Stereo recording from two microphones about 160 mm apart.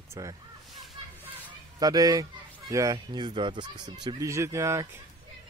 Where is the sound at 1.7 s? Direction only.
25° right (ahead or behind).